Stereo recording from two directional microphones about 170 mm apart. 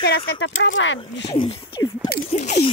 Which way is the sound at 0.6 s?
90° left.